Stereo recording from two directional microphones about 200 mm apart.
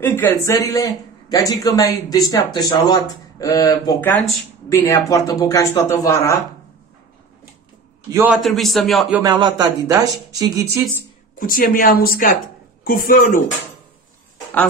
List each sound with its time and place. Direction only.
0.0 s speech: 10° left (ahead or behind)
8.1 s speech: 10° right (ahead or behind)
8.4 s a man's voice: centre (ahead or behind)
9.2 s speech: 20° right (ahead or behind)
11.3 s speech: 45° left (ahead or behind)